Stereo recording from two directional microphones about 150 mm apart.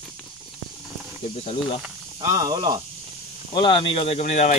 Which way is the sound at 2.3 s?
30° right (ahead or behind).